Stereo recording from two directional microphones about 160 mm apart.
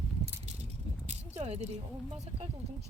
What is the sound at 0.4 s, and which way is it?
Keys jangling, 45° right (ahead or behind).